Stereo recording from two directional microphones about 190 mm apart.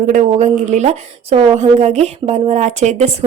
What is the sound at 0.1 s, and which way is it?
Speech, 40° right (ahead or behind).